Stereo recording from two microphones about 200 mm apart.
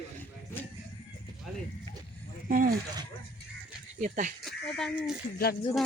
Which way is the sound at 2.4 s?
45° right (ahead or behind).